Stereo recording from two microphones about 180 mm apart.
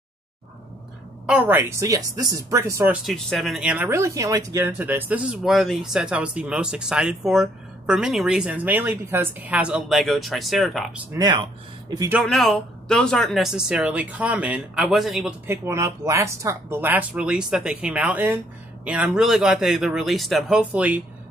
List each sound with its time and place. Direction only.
1.2 s speech: 5° right (ahead or behind)
3.1 s speech: centre (ahead or behind)
11.1 s speech: 20° right (ahead or behind)
12.1 s speech: centre (ahead or behind)
15.4 s speech: 15° right (ahead or behind)